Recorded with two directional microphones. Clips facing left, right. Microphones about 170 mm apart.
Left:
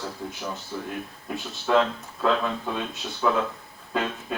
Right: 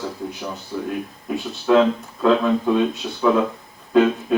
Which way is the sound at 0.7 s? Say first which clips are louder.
Right 9 dB; 15° right (ahead or behind).